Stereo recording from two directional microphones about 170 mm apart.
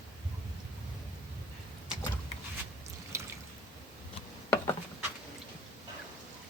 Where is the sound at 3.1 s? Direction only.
15° right (ahead or behind).